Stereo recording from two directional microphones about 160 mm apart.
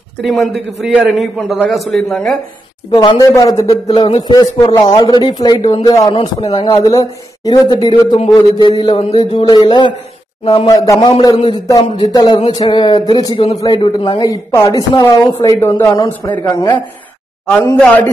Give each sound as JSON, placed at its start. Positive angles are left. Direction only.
{"t": 0.2, "sound": "a man's voice", "side_deg": 0}
{"t": 2.9, "sound": "a woman's voice", "side_deg": 25}
{"t": 10.7, "sound": "a woman's voice", "side_deg": 20}
{"t": 16.4, "sound": "speech", "side_deg": 15}